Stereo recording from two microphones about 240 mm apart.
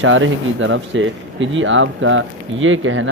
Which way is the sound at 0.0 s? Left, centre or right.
Right.